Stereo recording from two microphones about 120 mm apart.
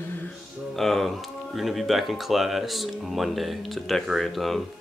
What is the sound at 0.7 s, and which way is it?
Speech, centre (ahead or behind).